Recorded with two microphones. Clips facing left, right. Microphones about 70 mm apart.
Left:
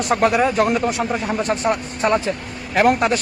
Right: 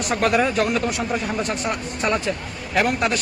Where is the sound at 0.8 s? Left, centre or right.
Left.